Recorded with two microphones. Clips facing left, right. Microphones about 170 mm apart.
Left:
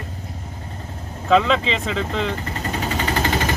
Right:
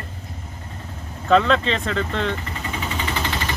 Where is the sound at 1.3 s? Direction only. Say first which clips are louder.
Even; centre (ahead or behind).